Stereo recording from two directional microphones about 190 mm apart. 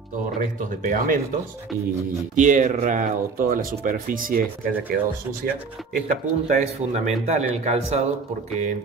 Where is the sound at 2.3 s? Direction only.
40° right (ahead or behind).